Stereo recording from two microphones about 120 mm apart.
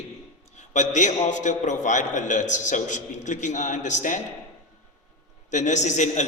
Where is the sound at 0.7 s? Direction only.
90° left.